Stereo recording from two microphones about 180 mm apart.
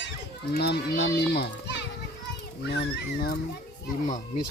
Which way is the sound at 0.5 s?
60° left (ahead or behind).